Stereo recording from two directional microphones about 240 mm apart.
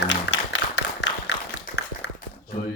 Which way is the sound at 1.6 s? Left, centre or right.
Left.